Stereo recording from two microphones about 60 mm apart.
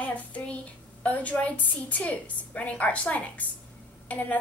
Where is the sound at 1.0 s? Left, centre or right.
Left.